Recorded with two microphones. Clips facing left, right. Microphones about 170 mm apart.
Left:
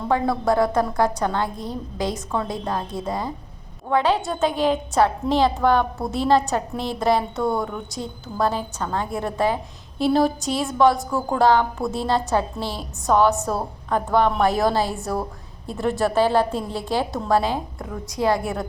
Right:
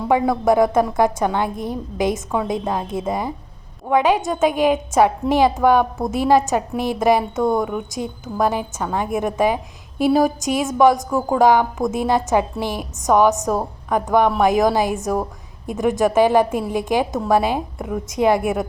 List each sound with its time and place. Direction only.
0.0 s a woman's voice: 15° right (ahead or behind)